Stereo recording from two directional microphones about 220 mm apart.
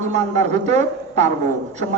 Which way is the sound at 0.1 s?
30° right (ahead or behind).